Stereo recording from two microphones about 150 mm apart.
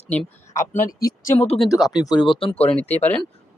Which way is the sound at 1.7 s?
Centre (ahead or behind).